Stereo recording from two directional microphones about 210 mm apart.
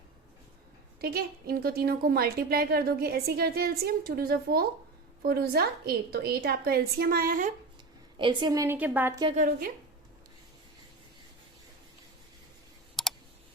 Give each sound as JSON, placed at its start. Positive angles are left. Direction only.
{"t": 1.0, "sound": "a woman's voice", "side_deg": -45}
{"t": 8.2, "sound": "a woman's voice", "side_deg": -20}
{"t": 9.2, "sound": "a woman's voice", "side_deg": -35}
{"t": 13.0, "sound": "clicking", "side_deg": 0}